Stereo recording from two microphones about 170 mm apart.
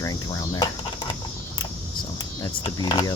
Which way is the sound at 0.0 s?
20° left (ahead or behind).